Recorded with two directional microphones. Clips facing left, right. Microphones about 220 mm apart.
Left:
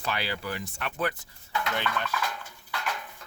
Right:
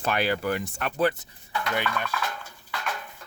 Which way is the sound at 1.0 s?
25° right (ahead or behind).